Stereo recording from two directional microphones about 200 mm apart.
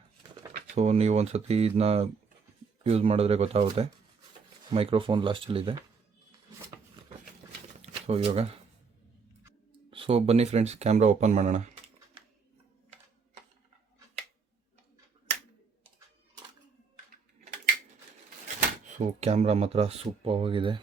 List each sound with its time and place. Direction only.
0.5 s speech: 35° right (ahead or behind)
7.8 s shuffling cards: 30° right (ahead or behind)
9.9 s speech: 25° right (ahead or behind)
18.9 s speech: 35° right (ahead or behind)